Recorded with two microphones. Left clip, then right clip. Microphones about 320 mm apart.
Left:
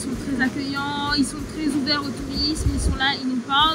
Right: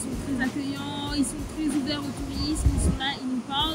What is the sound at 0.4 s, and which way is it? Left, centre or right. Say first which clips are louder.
Speech: left 8 dB; centre.